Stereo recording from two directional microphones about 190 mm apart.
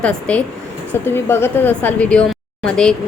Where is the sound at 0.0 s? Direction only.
5° left (ahead or behind).